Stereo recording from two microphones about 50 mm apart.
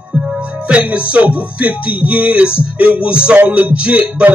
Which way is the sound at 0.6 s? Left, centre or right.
Right.